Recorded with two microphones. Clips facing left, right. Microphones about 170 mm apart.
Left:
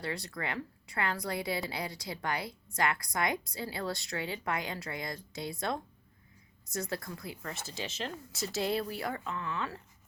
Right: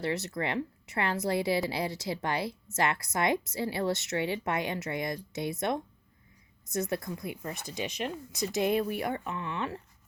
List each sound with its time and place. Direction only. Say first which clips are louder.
0.0 s speech: right 6 dB; 25° right (ahead or behind)